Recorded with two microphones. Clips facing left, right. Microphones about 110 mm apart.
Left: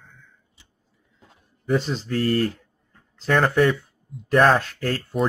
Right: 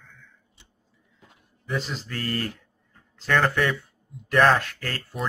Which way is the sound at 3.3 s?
15° left (ahead or behind).